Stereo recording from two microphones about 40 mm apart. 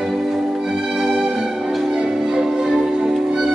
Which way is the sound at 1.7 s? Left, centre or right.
Centre.